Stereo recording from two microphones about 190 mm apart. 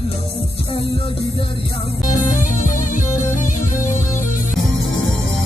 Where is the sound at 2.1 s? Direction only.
45° left (ahead or behind).